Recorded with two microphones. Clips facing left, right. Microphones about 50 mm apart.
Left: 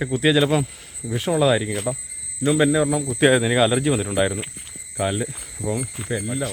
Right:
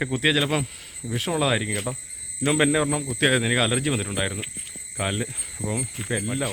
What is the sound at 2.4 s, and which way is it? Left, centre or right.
Speech, right.